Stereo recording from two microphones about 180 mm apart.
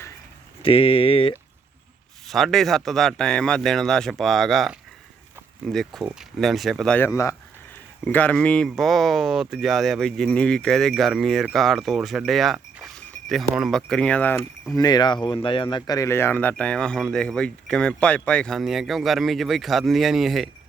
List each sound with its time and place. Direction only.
0.6 s speech: 30° left (ahead or behind)
2.2 s speech: centre (ahead or behind)
7.1 s speech: 15° left (ahead or behind)
14.8 s speech: 25° left (ahead or behind); by 20.5 s centre (ahead or behind)